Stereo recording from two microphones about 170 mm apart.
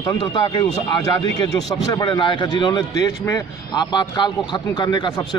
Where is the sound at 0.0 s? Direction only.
25° left (ahead or behind).